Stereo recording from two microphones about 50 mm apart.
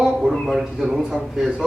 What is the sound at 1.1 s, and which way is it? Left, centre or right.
Speech, centre.